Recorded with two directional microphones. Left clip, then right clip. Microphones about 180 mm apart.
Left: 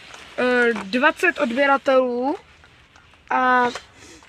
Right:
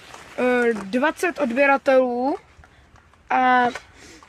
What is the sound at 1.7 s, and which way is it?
Speech, 30° right (ahead or behind).